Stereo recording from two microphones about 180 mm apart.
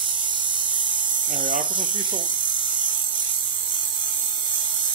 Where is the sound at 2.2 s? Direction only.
25° right (ahead or behind).